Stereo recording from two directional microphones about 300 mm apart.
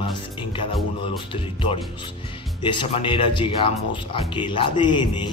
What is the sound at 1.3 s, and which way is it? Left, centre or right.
Speech, centre.